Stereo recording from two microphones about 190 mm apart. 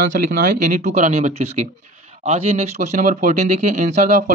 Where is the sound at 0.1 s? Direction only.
50° right (ahead or behind).